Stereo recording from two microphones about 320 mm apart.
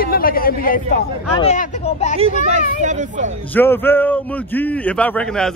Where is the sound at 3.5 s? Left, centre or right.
Centre.